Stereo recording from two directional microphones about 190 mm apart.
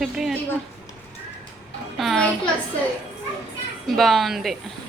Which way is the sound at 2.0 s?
Centre (ahead or behind).